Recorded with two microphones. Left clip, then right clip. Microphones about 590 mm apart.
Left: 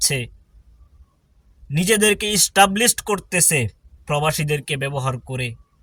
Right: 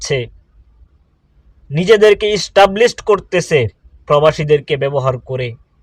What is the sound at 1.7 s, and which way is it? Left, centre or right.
Speech, left.